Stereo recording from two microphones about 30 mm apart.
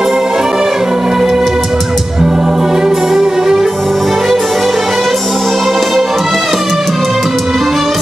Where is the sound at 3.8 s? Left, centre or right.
Centre.